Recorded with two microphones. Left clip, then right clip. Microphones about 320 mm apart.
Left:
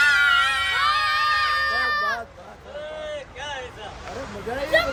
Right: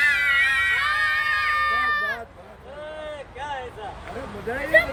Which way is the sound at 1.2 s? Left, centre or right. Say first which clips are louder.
Left 1 dB; centre.